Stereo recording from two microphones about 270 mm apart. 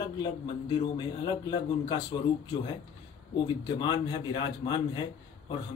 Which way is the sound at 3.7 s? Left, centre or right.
Centre.